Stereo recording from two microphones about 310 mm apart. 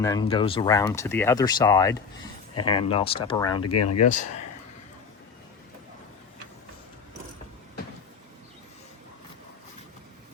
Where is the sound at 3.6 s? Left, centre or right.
Left.